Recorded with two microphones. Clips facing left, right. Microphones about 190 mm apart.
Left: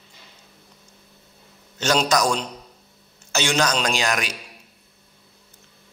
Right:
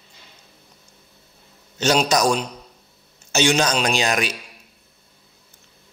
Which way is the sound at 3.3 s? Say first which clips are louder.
Right 3 dB; 20° right (ahead or behind).